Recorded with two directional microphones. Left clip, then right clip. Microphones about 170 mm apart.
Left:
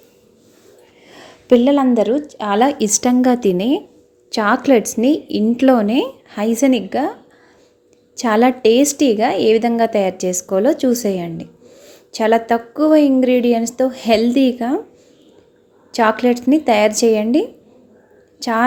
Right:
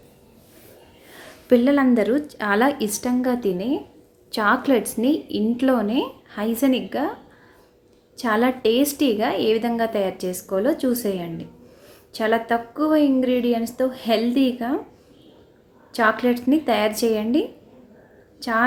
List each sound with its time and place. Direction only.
1.5 s a woman's voice: 20° left (ahead or behind); by 2.6 s 5° left (ahead or behind)
2.7 s a woman's voice: 35° left (ahead or behind)
3.0 s a woman's voice: 50° left (ahead or behind)
4.3 s a woman's voice: 30° left (ahead or behind)
8.1 s a woman's voice: 35° left (ahead or behind)
15.9 s a woman's voice: 35° left (ahead or behind)